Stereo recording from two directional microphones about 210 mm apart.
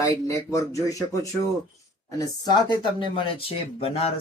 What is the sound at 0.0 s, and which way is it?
Speech, 15° left (ahead or behind).